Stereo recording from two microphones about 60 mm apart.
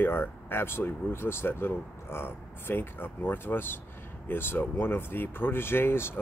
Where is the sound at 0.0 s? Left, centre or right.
Left.